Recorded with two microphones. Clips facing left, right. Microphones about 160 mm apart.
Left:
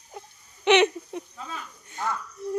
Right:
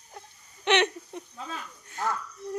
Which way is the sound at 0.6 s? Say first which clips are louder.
Left 5 dB; 5° left (ahead or behind).